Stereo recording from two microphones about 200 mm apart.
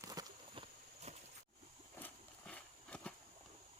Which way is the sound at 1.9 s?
10° left (ahead or behind).